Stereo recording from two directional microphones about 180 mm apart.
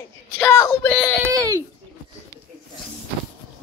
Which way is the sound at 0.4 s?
15° left (ahead or behind).